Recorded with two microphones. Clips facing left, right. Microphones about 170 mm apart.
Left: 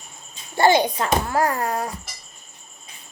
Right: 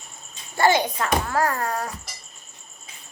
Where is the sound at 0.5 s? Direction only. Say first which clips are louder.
Left 3 dB; 30° left (ahead or behind).